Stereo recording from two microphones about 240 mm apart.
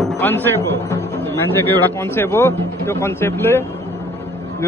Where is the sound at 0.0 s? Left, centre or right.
Centre.